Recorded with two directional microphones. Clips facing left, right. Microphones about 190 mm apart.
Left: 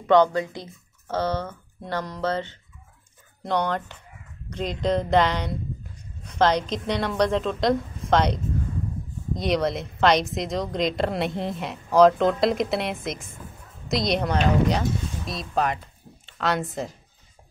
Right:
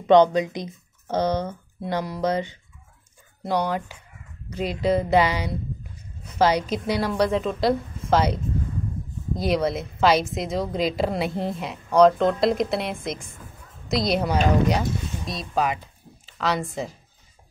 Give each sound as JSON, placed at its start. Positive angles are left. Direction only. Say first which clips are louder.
{"t": 0.0, "sound": "a woman's voice", "louder": "right 3 dB", "side_deg": -20}